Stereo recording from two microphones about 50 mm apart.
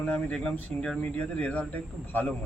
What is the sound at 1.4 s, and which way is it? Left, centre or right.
Speech, left.